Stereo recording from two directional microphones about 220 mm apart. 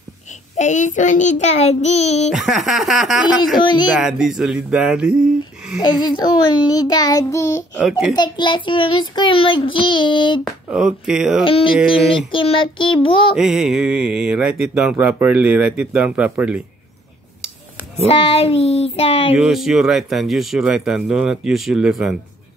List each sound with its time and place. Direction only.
0.6 s child singing: 35° left (ahead or behind)
2.3 s speech: centre (ahead or behind)
3.5 s child singing: 20° left (ahead or behind)
3.9 s speech: centre (ahead or behind)
5.9 s a child's voice: 20° left (ahead or behind)
8.2 s child singing: 20° left (ahead or behind)
10.4 s speech: 5° right (ahead or behind)
11.4 s child singing: 25° left (ahead or behind)
11.7 s speech: 5° right (ahead or behind)
12.3 s child singing: 25° left (ahead or behind)
13.4 s speech: 5° right (ahead or behind)
18.0 s child singing: 25° left (ahead or behind)
19.3 s speech: 5° right (ahead or behind)